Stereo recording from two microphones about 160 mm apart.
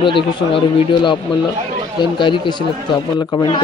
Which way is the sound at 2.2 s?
30° left (ahead or behind).